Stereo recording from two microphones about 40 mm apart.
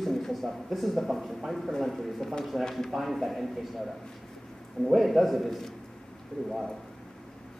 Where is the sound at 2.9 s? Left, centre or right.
Centre.